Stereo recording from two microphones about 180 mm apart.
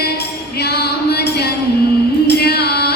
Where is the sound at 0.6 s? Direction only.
65° left (ahead or behind).